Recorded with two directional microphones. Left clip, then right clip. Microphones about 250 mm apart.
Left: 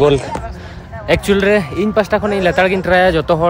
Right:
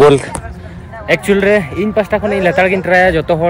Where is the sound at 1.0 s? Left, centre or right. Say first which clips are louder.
Right 2 dB; centre.